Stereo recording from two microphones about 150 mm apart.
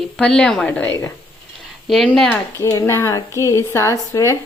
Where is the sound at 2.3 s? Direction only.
20° left (ahead or behind).